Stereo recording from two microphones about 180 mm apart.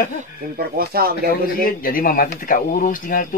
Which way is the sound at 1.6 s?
50° left (ahead or behind).